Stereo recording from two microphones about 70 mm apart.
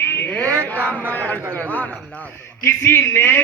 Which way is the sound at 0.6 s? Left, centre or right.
Right.